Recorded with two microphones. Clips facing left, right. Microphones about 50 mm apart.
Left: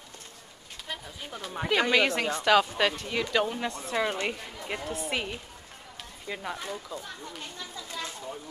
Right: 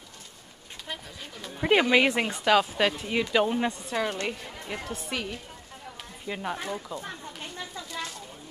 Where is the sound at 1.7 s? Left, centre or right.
Centre.